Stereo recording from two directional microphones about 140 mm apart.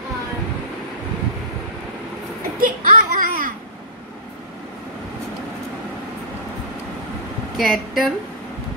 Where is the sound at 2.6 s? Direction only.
80° right.